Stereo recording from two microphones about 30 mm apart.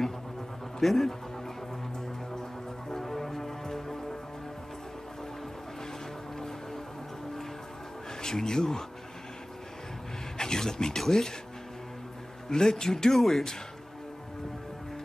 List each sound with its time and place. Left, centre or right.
0.7 s speech: centre
2.9 s music: centre
8.2 s speech: centre
10.3 s a sound: centre
11.0 s speech: centre
12.4 s speech: centre